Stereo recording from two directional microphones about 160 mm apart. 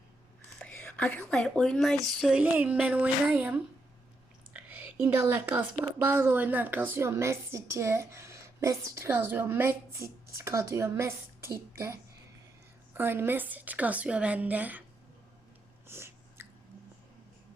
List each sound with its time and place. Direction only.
0.6 s a woman's voice: 5° left (ahead or behind); by 11.5 s 15° right (ahead or behind)
12.9 s a woman's voice: 15° right (ahead or behind)
15.9 s a sound: 15° right (ahead or behind)